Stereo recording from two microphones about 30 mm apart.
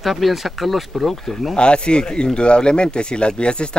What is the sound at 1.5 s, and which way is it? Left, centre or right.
Speech, left.